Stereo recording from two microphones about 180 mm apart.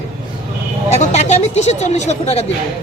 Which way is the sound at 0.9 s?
40° left (ahead or behind).